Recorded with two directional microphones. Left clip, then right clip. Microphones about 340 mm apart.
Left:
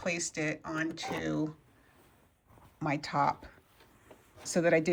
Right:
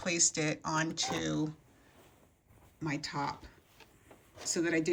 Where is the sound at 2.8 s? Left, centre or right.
Centre.